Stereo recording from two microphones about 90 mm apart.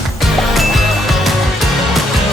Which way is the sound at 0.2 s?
Centre (ahead or behind).